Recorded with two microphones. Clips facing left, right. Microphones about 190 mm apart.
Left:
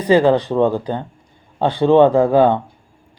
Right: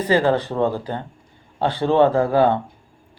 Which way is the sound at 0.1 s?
15° left (ahead or behind).